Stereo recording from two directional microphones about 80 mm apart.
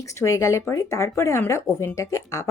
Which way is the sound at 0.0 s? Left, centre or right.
Left.